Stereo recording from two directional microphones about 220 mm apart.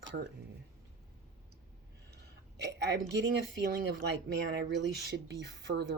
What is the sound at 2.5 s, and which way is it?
Speech, 50° right (ahead or behind).